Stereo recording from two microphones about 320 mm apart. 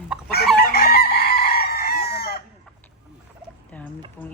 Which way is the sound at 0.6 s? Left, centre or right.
Left.